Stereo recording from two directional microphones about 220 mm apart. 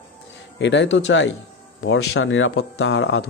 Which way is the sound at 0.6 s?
55° left (ahead or behind).